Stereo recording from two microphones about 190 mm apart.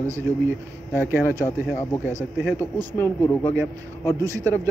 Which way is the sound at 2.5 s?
10° left (ahead or behind).